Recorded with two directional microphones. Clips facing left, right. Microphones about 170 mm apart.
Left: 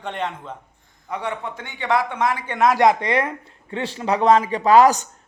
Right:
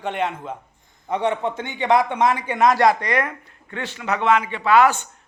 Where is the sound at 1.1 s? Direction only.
20° right (ahead or behind).